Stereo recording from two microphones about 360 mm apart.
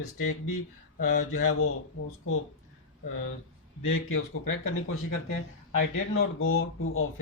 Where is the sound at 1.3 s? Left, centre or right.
Left.